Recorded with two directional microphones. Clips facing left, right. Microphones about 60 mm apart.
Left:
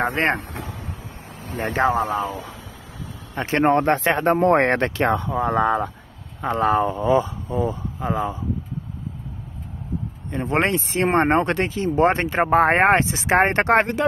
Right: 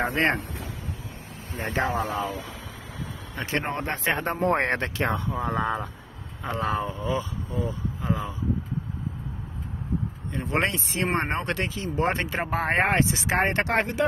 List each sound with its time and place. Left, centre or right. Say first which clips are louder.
0.0 s vehicle: left 3 dB; left
1.1 s vehicle: left 5 dB; left
1.8 s speech: left 6 dB; left
3.4 s speech: left 10 dB; left
3.7 s speech: left 9 dB; left
4.9 s speech: left 6 dB; left
6.4 s speech: left 8 dB; left
10.3 s speech: left 5 dB; left